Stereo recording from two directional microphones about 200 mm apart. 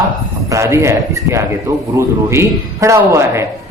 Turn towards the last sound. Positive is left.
turn(degrees=-15)  # may be behind; listen again after turning